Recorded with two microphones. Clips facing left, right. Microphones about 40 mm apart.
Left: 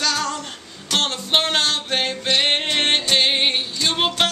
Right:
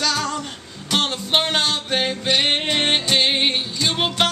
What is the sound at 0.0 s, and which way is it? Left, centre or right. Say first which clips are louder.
Music: even; centre.